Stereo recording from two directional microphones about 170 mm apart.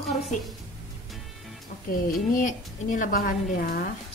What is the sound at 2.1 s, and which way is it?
A woman's voice, 50° left (ahead or behind).